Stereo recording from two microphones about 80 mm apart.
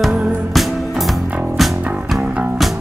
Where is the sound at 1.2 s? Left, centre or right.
Centre.